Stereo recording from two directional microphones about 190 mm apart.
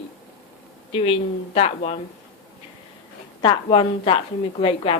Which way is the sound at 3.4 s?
25° left (ahead or behind).